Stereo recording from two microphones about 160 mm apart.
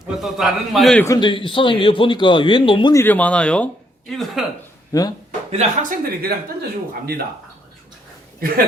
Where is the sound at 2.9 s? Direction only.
10° left (ahead or behind).